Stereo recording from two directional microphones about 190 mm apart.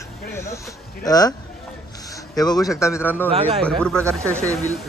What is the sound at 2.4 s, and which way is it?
Speech, 20° left (ahead or behind).